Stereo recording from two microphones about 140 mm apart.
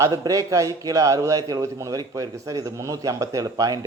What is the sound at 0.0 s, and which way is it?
A man's voice, 25° right (ahead or behind).